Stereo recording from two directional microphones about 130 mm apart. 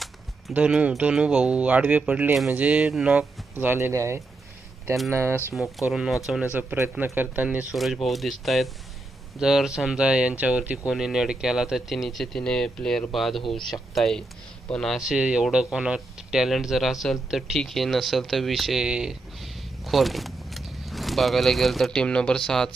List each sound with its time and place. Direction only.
0.5 s speech: 10° right (ahead or behind)
5.9 s speech: centre (ahead or behind)